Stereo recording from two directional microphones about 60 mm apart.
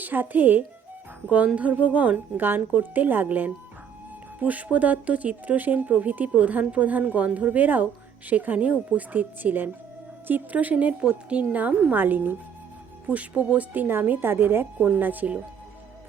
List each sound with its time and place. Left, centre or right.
0.0 s a woman's voice: right
1.5 s speech: right
13.8 s a woman's voice: right